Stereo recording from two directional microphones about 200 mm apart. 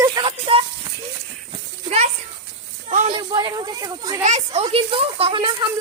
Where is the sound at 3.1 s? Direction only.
25° right (ahead or behind).